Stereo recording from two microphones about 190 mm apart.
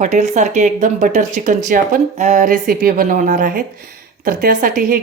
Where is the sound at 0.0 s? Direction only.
40° right (ahead or behind).